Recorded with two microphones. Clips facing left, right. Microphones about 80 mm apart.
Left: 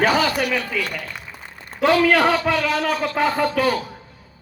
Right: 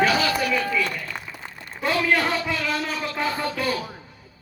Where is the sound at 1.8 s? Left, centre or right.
Left.